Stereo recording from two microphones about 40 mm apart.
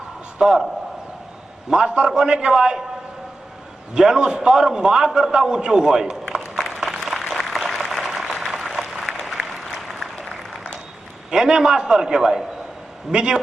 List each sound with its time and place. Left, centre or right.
0.3 s a man's voice: centre
1.7 s a man's voice: right
3.9 s a man's voice: centre
6.7 s a sound: centre
7.0 s a sound: centre
7.3 s applause: centre
11.3 s a man's voice: centre